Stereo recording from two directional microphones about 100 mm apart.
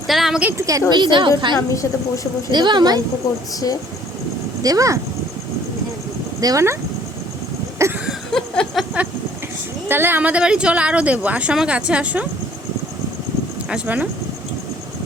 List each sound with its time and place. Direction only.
0.1 s a woman's voice: 5° right (ahead or behind)
0.5 s a woman's voice: 35° right (ahead or behind)
0.9 s speech: 50° right (ahead or behind)
1.5 s a woman's voice: 35° left (ahead or behind)
2.5 s speech: 45° right (ahead or behind)
4.6 s a woman's voice: 35° right (ahead or behind)
6.4 s a woman's voice: 30° right (ahead or behind)
7.8 s a sound: 30° right (ahead or behind)
8.3 s a sound: 5° left (ahead or behind)
9.9 s speech: 20° right (ahead or behind)
13.7 s speech: 15° right (ahead or behind)